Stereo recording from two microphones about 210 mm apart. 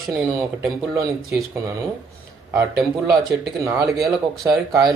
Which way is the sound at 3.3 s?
15° right (ahead or behind).